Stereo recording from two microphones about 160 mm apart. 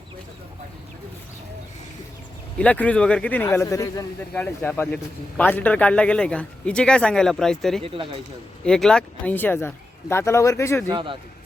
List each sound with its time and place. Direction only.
2.6 s a man's voice: 10° left (ahead or behind)
4.4 s a man's voice: 10° left (ahead or behind)
7.8 s speech: 35° right (ahead or behind)
8.6 s a man's voice: 5° left (ahead or behind)
10.8 s speech: 30° right (ahead or behind)